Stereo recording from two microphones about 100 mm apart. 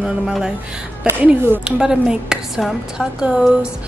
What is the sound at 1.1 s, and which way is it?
A woman's voice, 20° right (ahead or behind).